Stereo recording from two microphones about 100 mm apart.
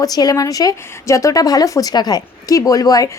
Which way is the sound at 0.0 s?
40° left (ahead or behind).